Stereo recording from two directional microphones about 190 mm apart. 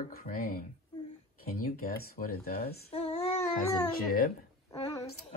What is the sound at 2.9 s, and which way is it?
Child singing, 30° left (ahead or behind).